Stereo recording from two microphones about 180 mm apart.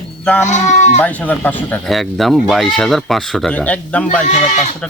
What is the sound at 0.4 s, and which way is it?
Speech, 40° left (ahead or behind).